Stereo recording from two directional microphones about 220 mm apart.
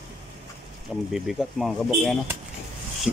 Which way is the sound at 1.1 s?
Centre (ahead or behind).